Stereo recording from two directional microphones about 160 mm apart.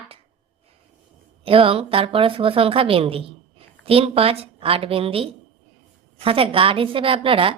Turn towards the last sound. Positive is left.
turn(degrees=-35)  # may be behind; listen again after turning